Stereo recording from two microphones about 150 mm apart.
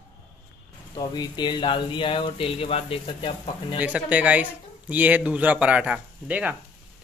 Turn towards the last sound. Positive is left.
turn(degrees=-10)  # may be behind; listen again after turning